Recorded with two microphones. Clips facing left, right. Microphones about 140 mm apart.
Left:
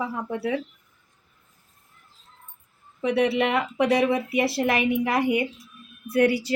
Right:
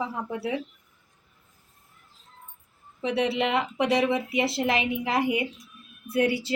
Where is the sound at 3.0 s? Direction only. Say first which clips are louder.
Left 3 dB; 25° right (ahead or behind).